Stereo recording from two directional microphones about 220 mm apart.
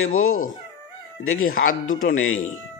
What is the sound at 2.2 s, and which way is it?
Speech, 70° left (ahead or behind).